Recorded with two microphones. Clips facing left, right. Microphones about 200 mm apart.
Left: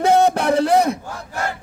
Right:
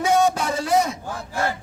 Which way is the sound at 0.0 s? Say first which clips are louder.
Left 4 dB; 60° left (ahead or behind).